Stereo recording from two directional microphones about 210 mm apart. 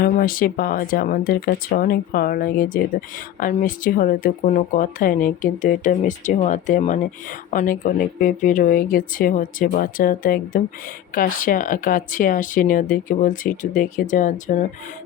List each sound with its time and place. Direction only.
0.0 s speech: 40° left (ahead or behind)